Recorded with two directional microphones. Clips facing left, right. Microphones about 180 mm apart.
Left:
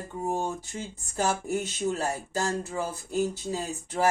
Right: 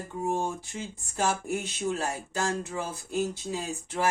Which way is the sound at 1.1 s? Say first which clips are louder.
Left 1 dB; 40° left (ahead or behind).